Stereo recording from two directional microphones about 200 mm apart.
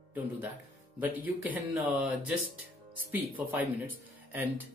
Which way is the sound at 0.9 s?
10° right (ahead or behind).